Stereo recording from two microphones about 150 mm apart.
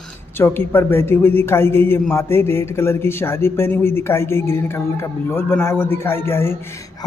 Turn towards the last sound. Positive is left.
turn(degrees=15)  # may be behind; listen again after turning